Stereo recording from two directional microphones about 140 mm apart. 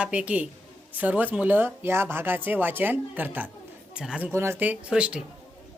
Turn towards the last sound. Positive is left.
turn(degrees=-5)  # may be behind; listen again after turning